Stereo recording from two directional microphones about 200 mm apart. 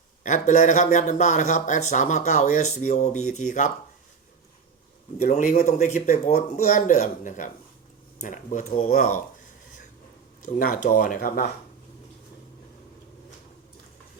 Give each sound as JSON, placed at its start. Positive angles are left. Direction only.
{"t": 0.2, "sound": "speech", "side_deg": 40}
{"t": 5.2, "sound": "speech", "side_deg": 35}
{"t": 10.4, "sound": "speech", "side_deg": 45}